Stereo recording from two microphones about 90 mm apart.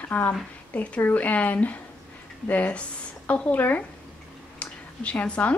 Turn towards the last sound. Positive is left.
turn(degrees=15)  # may be behind; listen again after turning